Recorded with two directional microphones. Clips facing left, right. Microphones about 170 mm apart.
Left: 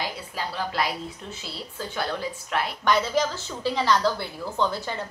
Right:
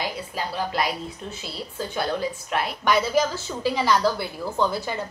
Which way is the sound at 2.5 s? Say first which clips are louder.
Right 1 dB; 10° right (ahead or behind).